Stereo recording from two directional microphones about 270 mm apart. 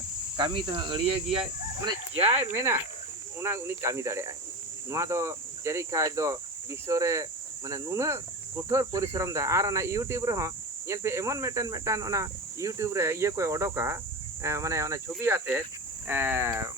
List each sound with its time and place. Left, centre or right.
0.3 s speech: centre
2.4 s speech: centre